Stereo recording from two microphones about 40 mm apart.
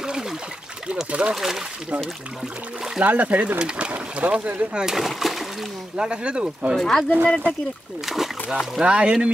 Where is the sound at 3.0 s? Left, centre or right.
Right.